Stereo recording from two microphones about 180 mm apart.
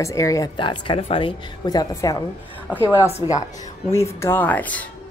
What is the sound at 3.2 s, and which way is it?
Speech, 25° left (ahead or behind).